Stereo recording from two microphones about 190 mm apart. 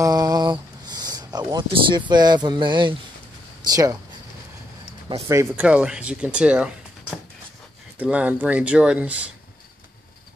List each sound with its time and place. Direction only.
0.0 s a sound: 20° right (ahead or behind)
1.5 s speech: 25° right (ahead or behind)
5.3 s speech: 10° right (ahead or behind)